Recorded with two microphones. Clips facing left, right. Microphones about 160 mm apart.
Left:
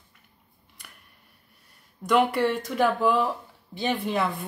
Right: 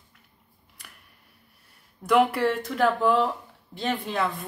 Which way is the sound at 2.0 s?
Centre (ahead or behind).